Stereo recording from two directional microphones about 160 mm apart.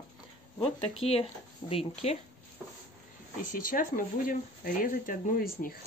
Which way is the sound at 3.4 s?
60° left (ahead or behind).